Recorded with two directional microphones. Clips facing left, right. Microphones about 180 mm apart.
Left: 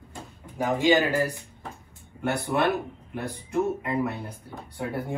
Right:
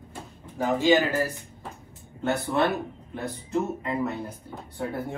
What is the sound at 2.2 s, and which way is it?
Speech, 15° left (ahead or behind).